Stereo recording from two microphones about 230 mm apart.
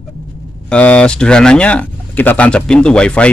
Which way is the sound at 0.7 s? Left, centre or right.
Centre.